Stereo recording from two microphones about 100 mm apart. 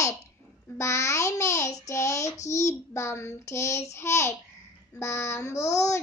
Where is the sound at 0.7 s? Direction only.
30° left (ahead or behind).